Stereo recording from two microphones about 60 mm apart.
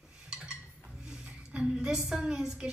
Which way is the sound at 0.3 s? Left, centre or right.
Centre.